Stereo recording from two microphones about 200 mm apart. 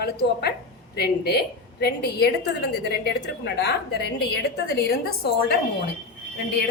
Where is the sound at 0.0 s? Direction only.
50° left (ahead or behind).